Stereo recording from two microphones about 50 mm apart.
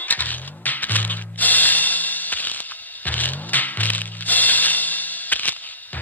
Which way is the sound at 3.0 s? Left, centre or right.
Left.